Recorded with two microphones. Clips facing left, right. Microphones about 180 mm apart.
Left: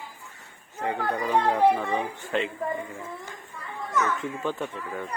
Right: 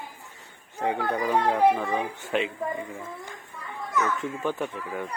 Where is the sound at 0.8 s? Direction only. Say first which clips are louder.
Right 2 dB; 15° right (ahead or behind).